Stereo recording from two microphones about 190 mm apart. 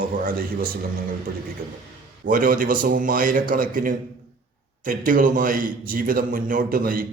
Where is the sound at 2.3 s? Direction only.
45° right (ahead or behind).